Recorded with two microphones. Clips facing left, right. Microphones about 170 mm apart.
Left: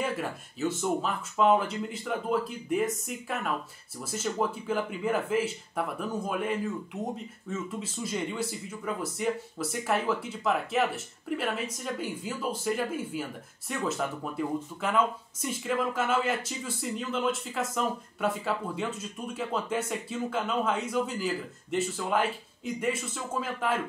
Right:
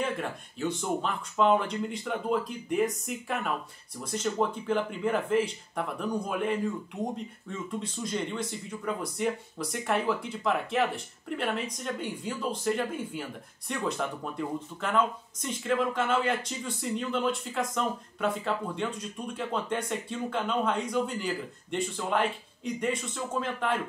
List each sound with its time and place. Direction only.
0.0 s speech: 5° left (ahead or behind)